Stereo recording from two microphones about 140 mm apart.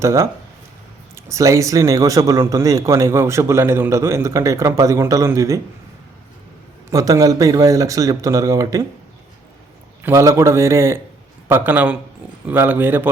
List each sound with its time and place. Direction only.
0.0 s speech: 20° right (ahead or behind)
6.9 s speech: 25° right (ahead or behind)
10.0 s a man's voice: 20° right (ahead or behind)